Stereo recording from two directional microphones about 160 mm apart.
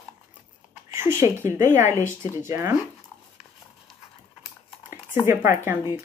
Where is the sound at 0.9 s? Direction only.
15° right (ahead or behind).